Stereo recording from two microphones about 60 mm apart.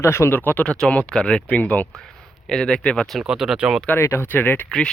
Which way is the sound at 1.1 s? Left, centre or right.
Centre.